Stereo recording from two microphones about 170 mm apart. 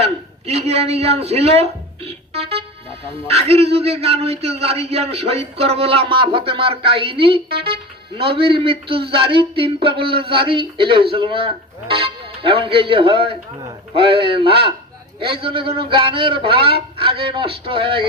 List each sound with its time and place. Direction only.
0.0 s a man's voice: 35° right (ahead or behind)